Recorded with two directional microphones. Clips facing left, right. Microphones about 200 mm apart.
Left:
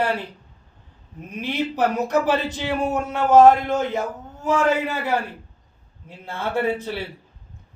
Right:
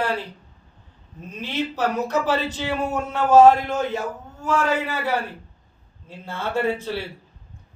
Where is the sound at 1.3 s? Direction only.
15° left (ahead or behind).